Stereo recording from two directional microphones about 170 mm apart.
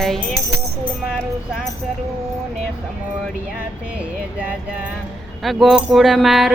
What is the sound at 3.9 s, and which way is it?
Speech, 10° right (ahead or behind).